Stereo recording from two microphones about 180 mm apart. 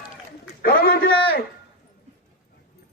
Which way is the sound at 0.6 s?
60° left (ahead or behind).